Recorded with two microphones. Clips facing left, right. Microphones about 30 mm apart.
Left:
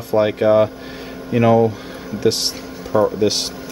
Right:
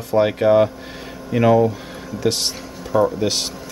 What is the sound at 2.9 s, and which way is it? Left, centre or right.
Speech, centre.